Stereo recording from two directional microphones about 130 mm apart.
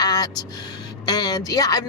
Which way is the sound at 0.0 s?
30° left (ahead or behind).